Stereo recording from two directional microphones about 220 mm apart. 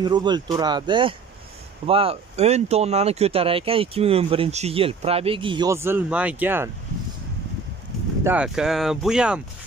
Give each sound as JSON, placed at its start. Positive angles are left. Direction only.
{"t": 0.0, "sound": "speech", "side_deg": -20}
{"t": 8.2, "sound": "speech", "side_deg": -5}